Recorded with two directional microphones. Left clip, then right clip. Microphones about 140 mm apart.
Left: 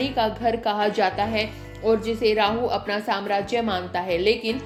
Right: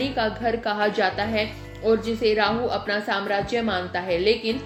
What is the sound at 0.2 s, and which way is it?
A woman's voice, 35° left (ahead or behind).